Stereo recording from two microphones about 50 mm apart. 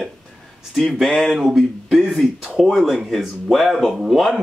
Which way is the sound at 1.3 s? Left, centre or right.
Centre.